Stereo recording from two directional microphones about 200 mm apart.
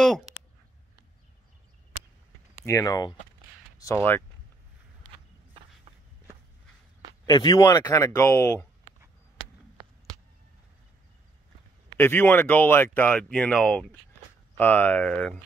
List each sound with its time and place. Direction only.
2.5 s speech: 15° left (ahead or behind)
7.2 s speech: 20° left (ahead or behind)
12.0 s speech: 10° left (ahead or behind)